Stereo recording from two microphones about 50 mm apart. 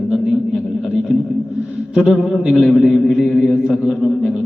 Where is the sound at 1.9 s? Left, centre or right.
Centre.